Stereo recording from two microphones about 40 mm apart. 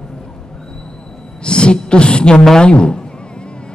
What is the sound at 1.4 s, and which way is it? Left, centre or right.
A man's voice, left.